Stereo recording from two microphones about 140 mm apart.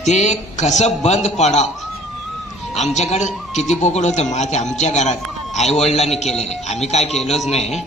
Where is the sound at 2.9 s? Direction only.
55° left (ahead or behind).